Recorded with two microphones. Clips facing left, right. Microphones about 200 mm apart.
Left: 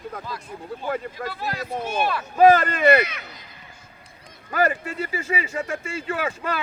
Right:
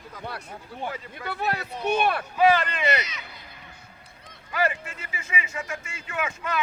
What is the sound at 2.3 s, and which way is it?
Speech, 45° left (ahead or behind).